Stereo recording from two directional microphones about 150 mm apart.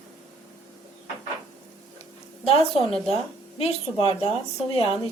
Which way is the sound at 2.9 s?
Centre (ahead or behind).